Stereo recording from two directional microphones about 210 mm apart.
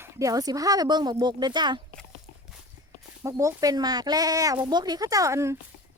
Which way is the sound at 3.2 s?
15° right (ahead or behind).